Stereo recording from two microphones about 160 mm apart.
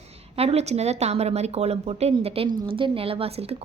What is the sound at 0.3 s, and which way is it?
A woman's voice, 40° right (ahead or behind).